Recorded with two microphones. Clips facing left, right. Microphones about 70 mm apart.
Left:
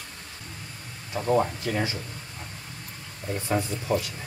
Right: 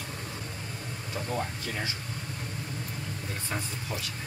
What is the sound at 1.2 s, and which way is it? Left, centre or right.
Speech, left.